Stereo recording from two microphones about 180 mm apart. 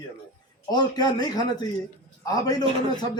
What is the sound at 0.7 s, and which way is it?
Speech, 25° left (ahead or behind).